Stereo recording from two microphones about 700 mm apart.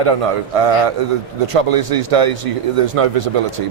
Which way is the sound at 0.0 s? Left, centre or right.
Right.